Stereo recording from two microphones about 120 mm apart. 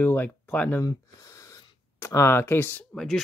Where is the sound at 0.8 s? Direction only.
30° left (ahead or behind).